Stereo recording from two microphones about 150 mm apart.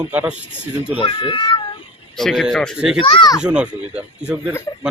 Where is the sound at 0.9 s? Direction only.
35° left (ahead or behind).